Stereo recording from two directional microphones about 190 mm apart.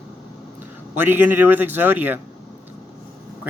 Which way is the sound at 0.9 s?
10° right (ahead or behind).